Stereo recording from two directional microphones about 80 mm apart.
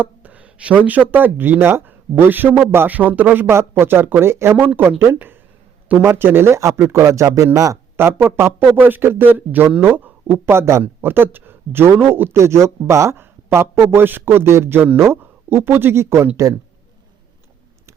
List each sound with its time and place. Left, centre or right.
0.0 s speech: centre; by 7.8 s right
7.9 s speech: right